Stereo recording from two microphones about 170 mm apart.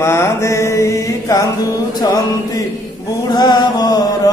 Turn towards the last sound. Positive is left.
turn(degrees=20)  # may be behind; listen again after turning